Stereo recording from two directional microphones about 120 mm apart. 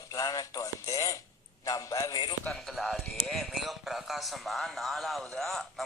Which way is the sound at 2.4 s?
5° left (ahead or behind).